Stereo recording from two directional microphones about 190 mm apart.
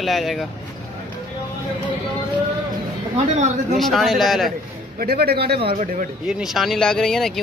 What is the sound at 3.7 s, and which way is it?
Speech, centre (ahead or behind).